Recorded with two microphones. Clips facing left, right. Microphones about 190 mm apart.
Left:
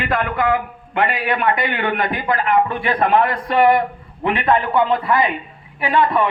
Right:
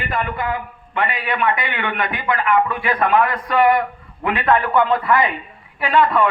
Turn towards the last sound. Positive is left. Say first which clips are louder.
# right 1 dB
turn(degrees=20)  # may be behind; listen again after turning